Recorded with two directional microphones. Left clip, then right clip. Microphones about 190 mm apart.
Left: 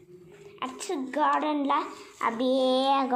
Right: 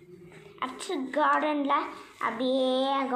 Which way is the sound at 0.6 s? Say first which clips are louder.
Even; 35° left (ahead or behind).